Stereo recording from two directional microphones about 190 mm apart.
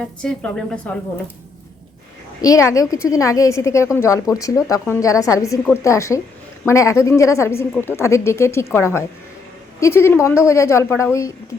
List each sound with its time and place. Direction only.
0.0 s a woman's voice: 5° left (ahead or behind)
2.4 s a woman's voice: 15° left (ahead or behind)